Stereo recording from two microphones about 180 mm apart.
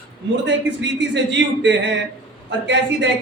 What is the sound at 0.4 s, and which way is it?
Speech, 80° right.